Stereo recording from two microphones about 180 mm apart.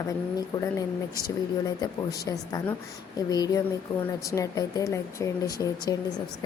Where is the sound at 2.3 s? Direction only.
20° left (ahead or behind).